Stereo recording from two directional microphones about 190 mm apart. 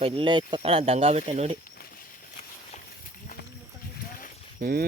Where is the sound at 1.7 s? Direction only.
50° left (ahead or behind).